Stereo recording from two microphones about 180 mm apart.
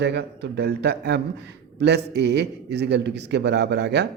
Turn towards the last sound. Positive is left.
turn(degrees=-70)  # may be behind; listen again after turning